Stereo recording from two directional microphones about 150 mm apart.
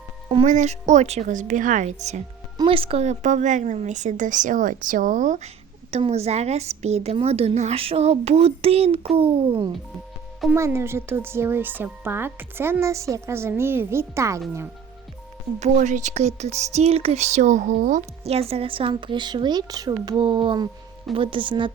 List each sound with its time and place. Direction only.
0.4 s speech: 55° right (ahead or behind)
2.6 s a woman's voice: 35° right (ahead or behind)
10.5 s speech: 15° right (ahead or behind)
15.6 s speech: 50° right (ahead or behind); by 21.7 s 35° right (ahead or behind)